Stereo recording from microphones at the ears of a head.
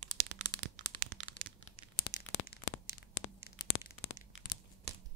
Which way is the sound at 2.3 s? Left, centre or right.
Left.